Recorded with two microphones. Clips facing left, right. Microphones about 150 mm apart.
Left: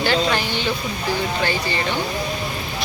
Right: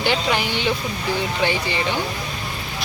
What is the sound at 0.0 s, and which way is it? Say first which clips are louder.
Speech: left 1 dB; 15° right (ahead or behind).